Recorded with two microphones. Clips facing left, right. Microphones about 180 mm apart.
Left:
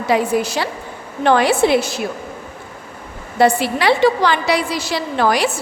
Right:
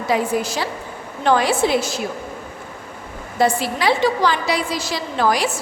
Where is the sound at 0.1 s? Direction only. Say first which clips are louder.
Left 3 dB; 65° left (ahead or behind).